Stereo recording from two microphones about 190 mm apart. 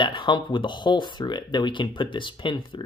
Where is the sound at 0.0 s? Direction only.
25° left (ahead or behind).